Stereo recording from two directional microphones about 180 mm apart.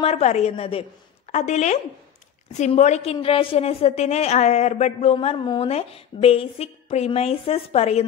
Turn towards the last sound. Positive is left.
turn(degrees=35)  # may be behind; listen again after turning